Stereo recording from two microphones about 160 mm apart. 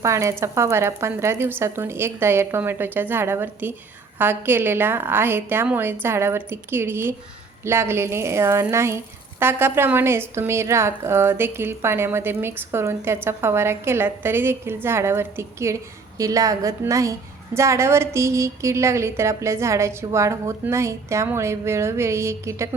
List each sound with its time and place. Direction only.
0.0 s a woman's voice: 20° right (ahead or behind)